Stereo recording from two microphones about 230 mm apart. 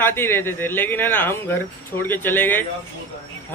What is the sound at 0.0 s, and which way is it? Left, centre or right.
Speech, centre.